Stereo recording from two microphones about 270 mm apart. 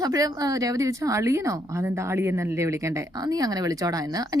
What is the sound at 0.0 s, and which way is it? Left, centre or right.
A woman's voice, centre.